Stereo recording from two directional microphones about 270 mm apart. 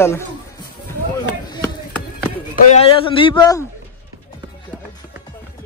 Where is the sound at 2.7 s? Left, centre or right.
Centre.